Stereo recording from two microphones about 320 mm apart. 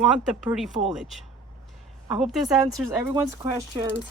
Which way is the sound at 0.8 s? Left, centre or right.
Centre.